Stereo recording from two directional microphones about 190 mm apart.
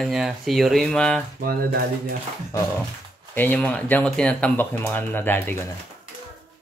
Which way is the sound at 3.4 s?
10° left (ahead or behind).